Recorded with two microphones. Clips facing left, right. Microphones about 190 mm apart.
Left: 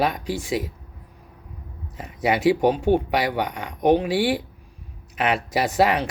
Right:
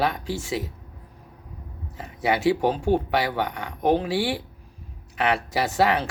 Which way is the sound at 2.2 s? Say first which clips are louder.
Left 3 dB; 20° left (ahead or behind).